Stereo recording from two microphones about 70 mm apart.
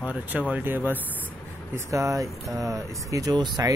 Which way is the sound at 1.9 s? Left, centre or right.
Right.